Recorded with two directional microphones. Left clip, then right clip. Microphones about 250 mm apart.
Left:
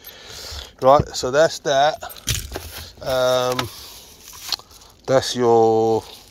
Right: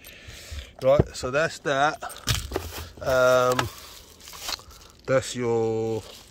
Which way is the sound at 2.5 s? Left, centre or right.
Right.